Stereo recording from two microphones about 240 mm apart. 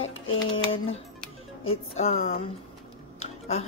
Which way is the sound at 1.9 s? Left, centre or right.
Left.